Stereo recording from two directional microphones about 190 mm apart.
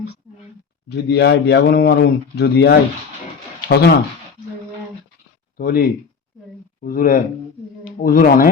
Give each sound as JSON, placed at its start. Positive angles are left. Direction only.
{"t": 0.9, "sound": "speech", "side_deg": 60}
{"t": 5.5, "sound": "speech", "side_deg": 50}